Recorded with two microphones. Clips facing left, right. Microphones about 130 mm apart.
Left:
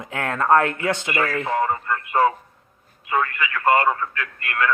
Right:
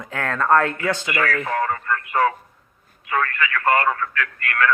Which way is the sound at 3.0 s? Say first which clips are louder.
Even; 20° left (ahead or behind).